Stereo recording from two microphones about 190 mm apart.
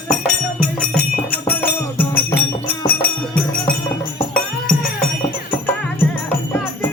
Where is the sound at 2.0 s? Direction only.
10° left (ahead or behind).